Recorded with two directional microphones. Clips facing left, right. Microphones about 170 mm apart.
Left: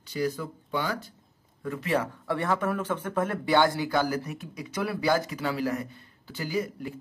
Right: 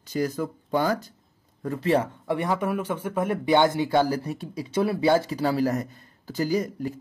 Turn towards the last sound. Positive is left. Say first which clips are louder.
# right 5 dB
turn(degrees=-40)  # may be behind; listen again after turning